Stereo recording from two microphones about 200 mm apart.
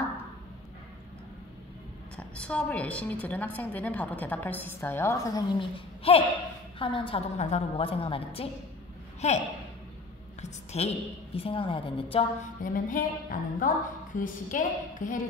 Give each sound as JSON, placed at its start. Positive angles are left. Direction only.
{"t": 2.1, "sound": "a woman's voice", "side_deg": 5}
{"t": 10.4, "sound": "a woman's voice", "side_deg": 30}
{"t": 12.6, "sound": "a woman's voice", "side_deg": 45}